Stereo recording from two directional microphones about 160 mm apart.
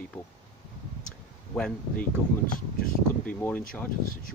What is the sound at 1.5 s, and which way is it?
Speech, 5° left (ahead or behind).